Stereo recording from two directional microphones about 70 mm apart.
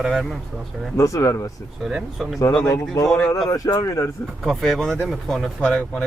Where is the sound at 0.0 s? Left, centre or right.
Centre.